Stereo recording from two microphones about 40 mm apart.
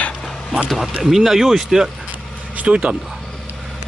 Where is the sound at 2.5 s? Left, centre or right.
Right.